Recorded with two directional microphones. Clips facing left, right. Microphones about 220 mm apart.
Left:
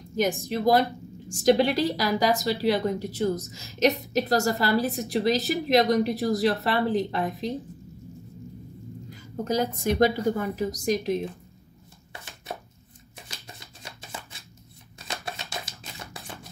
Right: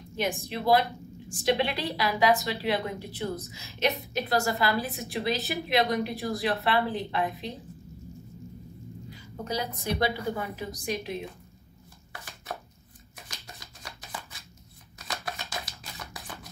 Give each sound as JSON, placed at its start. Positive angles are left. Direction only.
{"t": 0.2, "sound": "a woman's voice", "side_deg": 40}
{"t": 9.1, "sound": "a woman's voice", "side_deg": 45}
{"t": 12.1, "sound": "chopping", "side_deg": 25}
{"t": 15.8, "sound": "a sound", "side_deg": 25}